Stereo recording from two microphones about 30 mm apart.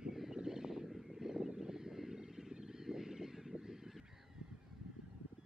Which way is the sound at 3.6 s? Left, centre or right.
Centre.